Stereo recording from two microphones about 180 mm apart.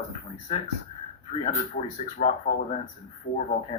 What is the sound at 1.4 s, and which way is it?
Speech, 40° left (ahead or behind).